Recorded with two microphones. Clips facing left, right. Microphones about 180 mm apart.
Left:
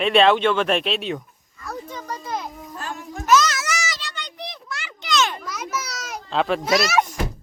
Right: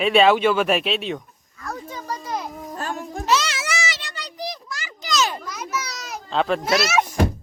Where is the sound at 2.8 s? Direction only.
35° right (ahead or behind).